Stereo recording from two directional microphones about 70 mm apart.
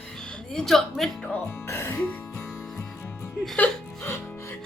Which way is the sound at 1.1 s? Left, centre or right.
Centre.